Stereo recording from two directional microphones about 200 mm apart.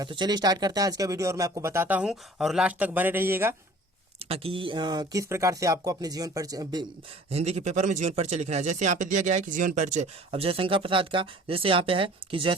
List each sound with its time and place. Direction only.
0.0 s speech: 20° right (ahead or behind)
4.2 s speech: 30° right (ahead or behind)
7.3 s speech: 35° right (ahead or behind)